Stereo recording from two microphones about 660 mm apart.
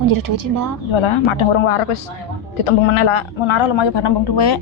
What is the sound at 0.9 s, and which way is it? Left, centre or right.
Speech, left.